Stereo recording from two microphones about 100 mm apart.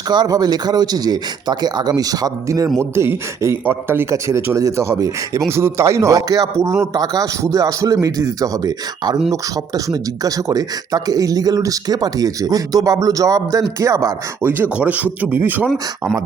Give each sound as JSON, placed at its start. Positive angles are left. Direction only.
{"t": 0.1, "sound": "speech", "side_deg": -45}
{"t": 2.7, "sound": "speech", "side_deg": -25}
{"t": 14.4, "sound": "speech", "side_deg": -15}